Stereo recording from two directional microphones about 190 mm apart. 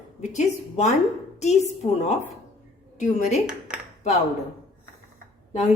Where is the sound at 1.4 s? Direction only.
35° left (ahead or behind).